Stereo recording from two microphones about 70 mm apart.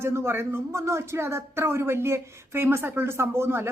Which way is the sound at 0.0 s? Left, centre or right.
Right.